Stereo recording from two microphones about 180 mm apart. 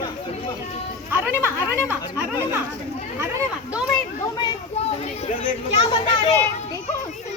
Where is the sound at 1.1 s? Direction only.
10° right (ahead or behind).